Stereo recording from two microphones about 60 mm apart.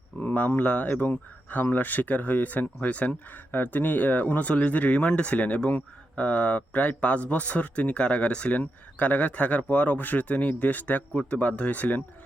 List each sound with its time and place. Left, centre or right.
0.2 s speech: left